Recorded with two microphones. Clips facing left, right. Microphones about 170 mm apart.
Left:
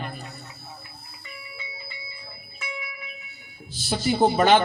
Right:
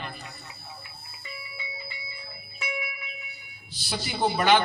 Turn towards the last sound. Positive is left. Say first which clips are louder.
# left 4 dB
turn(degrees=45)  # may be behind; listen again after turning